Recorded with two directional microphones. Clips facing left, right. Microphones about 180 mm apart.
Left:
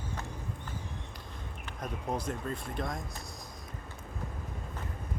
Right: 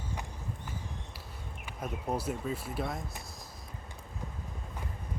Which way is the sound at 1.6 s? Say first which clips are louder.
Right 1 dB; 10° right (ahead or behind).